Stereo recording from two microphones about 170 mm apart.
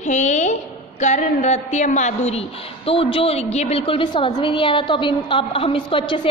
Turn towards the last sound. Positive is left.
turn(degrees=30)  # may be behind; listen again after turning